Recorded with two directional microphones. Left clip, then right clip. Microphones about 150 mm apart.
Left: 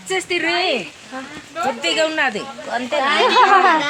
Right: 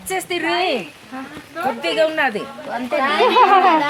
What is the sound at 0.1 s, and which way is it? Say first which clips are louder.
Speech: left 2 dB; 90° right.